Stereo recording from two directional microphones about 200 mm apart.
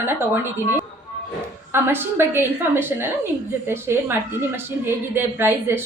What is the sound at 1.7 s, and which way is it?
A woman's voice, 10° right (ahead or behind).